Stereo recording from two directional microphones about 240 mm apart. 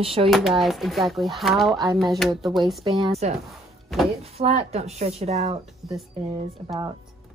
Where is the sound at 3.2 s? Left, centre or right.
Right.